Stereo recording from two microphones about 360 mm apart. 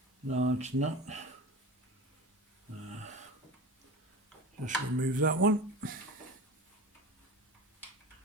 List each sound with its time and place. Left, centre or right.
0.3 s speech: centre
4.6 s speech: right